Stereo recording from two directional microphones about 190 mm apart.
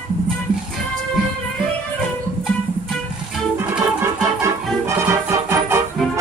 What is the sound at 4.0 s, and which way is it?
Music, 15° right (ahead or behind).